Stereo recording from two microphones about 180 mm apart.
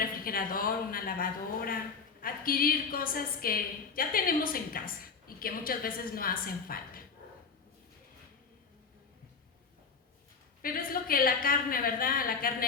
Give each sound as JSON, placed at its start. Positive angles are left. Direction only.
{"t": 0.0, "sound": "a woman's voice", "side_deg": 55}
{"t": 10.6, "sound": "a woman's voice", "side_deg": 55}